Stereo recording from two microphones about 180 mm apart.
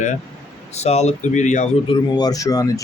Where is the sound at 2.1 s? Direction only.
20° left (ahead or behind).